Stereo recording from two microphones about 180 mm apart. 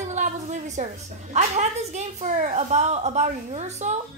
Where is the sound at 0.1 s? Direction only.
40° right (ahead or behind).